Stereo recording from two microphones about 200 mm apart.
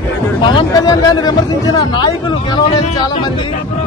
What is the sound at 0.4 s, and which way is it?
Speech, 20° left (ahead or behind).